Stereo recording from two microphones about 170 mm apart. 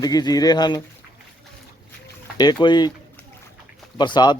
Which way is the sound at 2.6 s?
25° left (ahead or behind).